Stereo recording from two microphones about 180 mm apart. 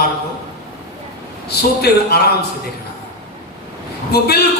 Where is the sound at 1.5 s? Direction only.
60° left (ahead or behind).